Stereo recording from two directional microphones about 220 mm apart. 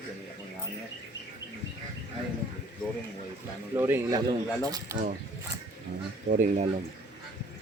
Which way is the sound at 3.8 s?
10° right (ahead or behind).